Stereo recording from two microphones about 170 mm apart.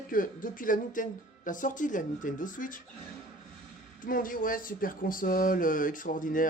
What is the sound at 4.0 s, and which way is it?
Speech, 55° left (ahead or behind).